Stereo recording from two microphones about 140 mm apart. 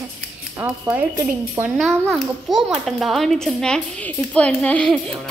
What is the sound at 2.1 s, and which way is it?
A child's voice, centre (ahead or behind).